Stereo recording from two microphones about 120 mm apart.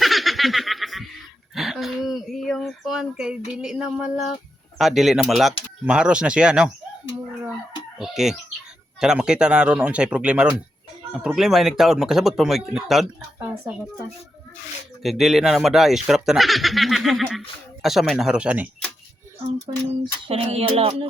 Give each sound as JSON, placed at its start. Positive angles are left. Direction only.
{"t": 0.0, "sound": "snicker", "side_deg": 0}
{"t": 1.5, "sound": "a sound", "side_deg": 0}
{"t": 3.5, "sound": "speech", "side_deg": -5}
{"t": 7.9, "sound": "speech", "side_deg": -5}
{"t": 15.0, "sound": "speech", "side_deg": 0}
{"t": 20.2, "sound": "music", "side_deg": -55}